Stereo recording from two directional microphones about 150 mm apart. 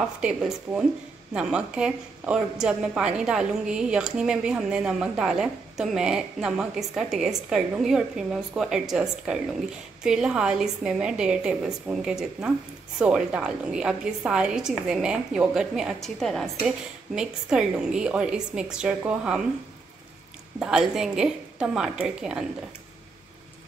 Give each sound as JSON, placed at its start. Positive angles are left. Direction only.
{"t": 0.2, "sound": "a woman's voice", "side_deg": -5}
{"t": 20.5, "sound": "a woman's voice", "side_deg": -5}